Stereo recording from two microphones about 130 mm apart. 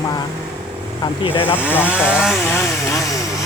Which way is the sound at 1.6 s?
15° left (ahead or behind).